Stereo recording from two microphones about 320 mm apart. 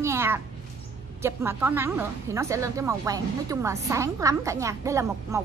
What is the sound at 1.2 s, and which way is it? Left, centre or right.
A woman's voice, centre.